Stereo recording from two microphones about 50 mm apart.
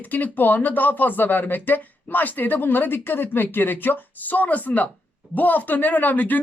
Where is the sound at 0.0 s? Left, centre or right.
Left.